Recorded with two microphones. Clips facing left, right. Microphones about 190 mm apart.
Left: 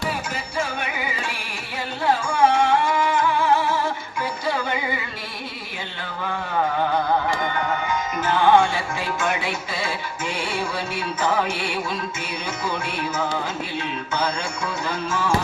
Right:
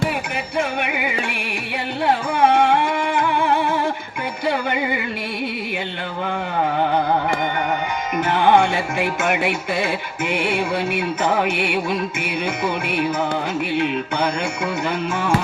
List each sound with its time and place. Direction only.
0.8 s music: 60° right (ahead or behind)
8.5 s music: 60° right (ahead or behind)